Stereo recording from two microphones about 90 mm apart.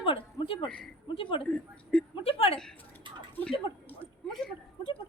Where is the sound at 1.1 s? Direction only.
80° left.